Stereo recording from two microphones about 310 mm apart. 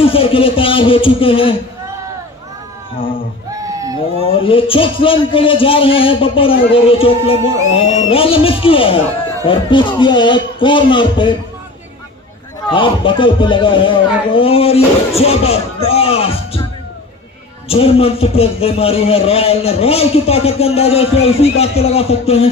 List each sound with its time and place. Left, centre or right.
0.0 s speech: centre
4.4 s speech: centre
12.6 s speech: centre
17.6 s a man's voice: centre